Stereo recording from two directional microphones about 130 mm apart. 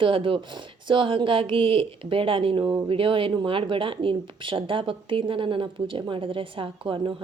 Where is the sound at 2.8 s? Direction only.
45° right (ahead or behind).